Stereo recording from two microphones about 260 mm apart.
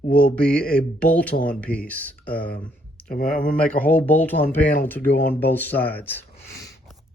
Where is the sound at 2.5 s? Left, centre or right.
Centre.